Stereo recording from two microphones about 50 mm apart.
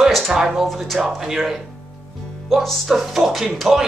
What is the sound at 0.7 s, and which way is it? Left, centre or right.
Speech, centre.